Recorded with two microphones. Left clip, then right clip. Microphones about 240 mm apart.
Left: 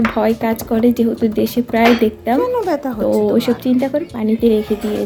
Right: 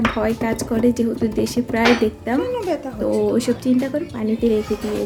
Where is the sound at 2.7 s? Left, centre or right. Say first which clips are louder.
Left 5 dB; left.